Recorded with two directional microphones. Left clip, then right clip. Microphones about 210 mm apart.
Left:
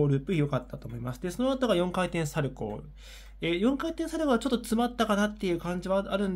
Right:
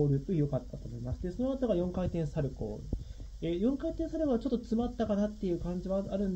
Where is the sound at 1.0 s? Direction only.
55° left (ahead or behind).